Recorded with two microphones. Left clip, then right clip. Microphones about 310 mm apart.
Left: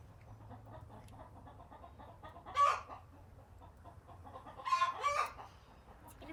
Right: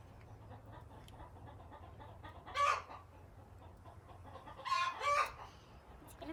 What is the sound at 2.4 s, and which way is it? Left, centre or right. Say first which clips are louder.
Chicken: left 3 dB; centre.